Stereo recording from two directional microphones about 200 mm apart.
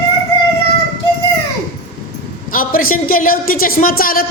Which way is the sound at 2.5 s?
45° left (ahead or behind).